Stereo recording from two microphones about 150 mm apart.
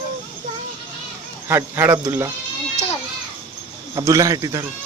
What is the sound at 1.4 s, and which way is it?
Speech, 15° right (ahead or behind).